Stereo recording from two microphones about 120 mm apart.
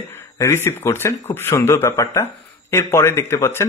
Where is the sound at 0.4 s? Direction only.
20° left (ahead or behind).